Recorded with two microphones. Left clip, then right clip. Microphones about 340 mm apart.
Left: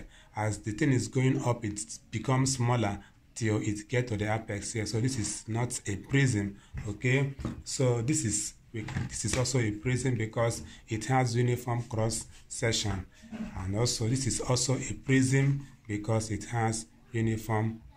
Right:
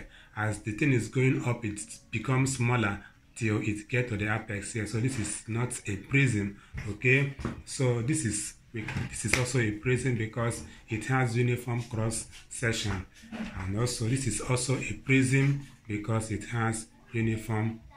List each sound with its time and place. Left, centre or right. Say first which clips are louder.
0.3 s speech: right 1 dB; left
13.7 s speech: left 2 dB; left